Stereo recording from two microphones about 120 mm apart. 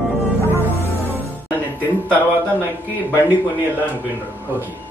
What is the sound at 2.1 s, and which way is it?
Speech, 15° right (ahead or behind).